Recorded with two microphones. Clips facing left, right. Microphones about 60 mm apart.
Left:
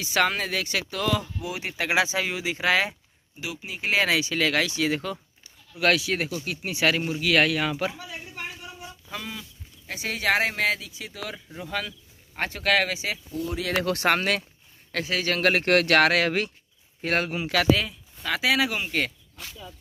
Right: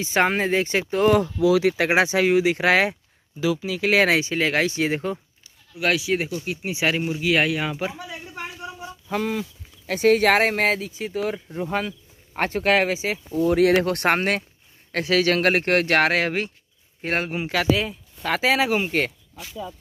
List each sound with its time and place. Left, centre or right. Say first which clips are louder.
0.0 s speech: right 4 dB; right
1.4 s speech: right 13 dB; right
1.9 s speech: right 1 dB; right
4.2 s speech: right 3 dB; right
5.8 s speech: right 1 dB; centre
9.1 s speech: right 12 dB; right
13.5 s speech: right 9 dB; right
15.0 s speech: right 8 dB; right
15.3 s speech: right 3 dB; right
15.6 s speech: even; right
17.8 s speech: right 4 dB; right